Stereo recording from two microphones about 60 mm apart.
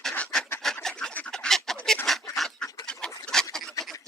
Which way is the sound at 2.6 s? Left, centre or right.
Centre.